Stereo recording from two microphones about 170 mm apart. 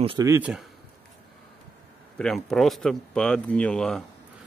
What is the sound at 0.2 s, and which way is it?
Speech, 15° right (ahead or behind).